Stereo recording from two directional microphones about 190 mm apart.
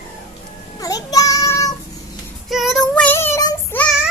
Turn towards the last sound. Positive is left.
turn(degrees=15)  # may be behind; listen again after turning